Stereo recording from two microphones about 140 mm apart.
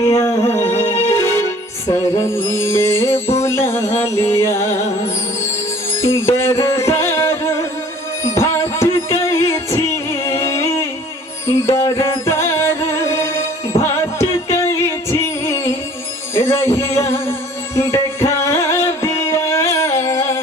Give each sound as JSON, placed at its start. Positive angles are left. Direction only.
{"t": 0.0, "sound": "music", "side_deg": 25}
{"t": 0.7, "sound": "music", "side_deg": 50}
{"t": 1.1, "sound": "music", "side_deg": 20}
{"t": 6.0, "sound": "music", "side_deg": 20}